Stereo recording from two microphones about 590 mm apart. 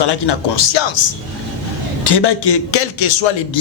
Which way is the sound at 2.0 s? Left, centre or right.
Left.